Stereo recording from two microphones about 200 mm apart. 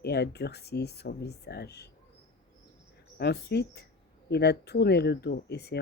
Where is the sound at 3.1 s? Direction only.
55° left (ahead or behind).